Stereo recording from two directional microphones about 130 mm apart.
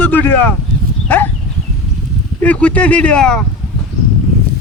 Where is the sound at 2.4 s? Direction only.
10° left (ahead or behind).